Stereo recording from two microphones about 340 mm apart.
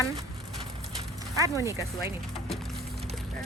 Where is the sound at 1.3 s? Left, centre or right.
Centre.